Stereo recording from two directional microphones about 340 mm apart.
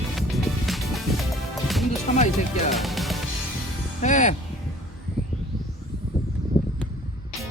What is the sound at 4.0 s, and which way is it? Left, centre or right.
Speech, left.